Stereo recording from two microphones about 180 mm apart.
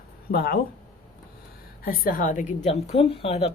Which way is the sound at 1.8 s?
55° left (ahead or behind).